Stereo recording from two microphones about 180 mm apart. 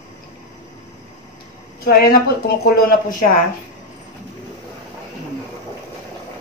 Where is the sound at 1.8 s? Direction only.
55° left (ahead or behind).